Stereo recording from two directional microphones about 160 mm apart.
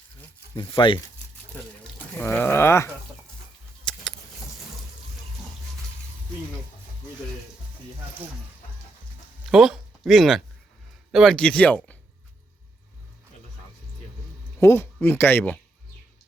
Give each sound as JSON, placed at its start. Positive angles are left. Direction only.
{"t": 0.5, "sound": "speech", "side_deg": 30}
{"t": 2.1, "sound": "speech", "side_deg": 10}
{"t": 3.9, "sound": "vehicle", "side_deg": 5}
{"t": 9.5, "sound": "speech", "side_deg": 0}
{"t": 14.6, "sound": "speech", "side_deg": 15}